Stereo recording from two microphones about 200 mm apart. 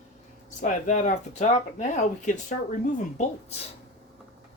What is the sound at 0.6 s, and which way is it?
Speech, 40° left (ahead or behind).